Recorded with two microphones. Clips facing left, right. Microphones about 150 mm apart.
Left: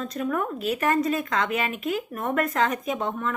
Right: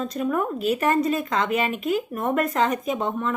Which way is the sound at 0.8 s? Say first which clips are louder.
Even; 30° right (ahead or behind).